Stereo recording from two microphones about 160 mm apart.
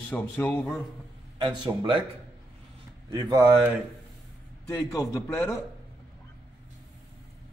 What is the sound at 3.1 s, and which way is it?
Speech, 25° right (ahead or behind).